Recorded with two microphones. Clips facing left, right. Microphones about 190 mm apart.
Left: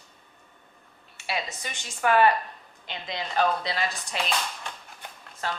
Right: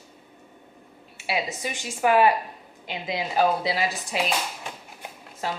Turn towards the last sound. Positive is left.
turn(degrees=-10)  # may be behind; listen again after turning